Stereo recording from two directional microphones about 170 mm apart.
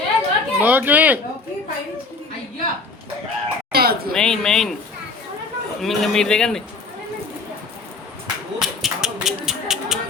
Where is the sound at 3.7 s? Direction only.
65° right (ahead or behind).